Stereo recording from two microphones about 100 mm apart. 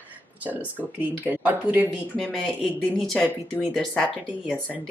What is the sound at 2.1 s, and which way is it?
Speech, 5° left (ahead or behind).